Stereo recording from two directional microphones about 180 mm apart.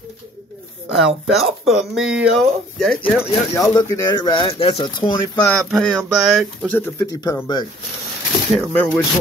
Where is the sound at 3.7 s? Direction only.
20° left (ahead or behind).